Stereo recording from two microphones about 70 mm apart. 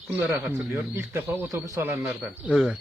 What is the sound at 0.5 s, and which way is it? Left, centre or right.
Speech, right.